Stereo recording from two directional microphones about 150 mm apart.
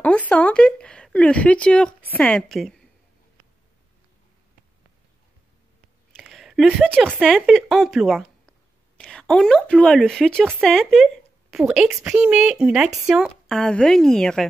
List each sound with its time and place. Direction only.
0.3 s speech: 10° left (ahead or behind)
6.2 s a sound: centre (ahead or behind)
7.2 s speech: centre (ahead or behind)